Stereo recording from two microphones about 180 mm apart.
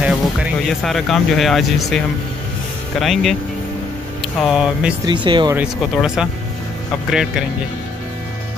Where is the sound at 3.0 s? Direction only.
Centre (ahead or behind).